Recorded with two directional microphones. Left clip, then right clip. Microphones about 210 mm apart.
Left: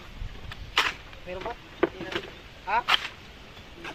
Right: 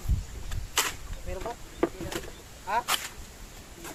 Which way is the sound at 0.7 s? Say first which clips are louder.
Left 4 dB; 10° right (ahead or behind).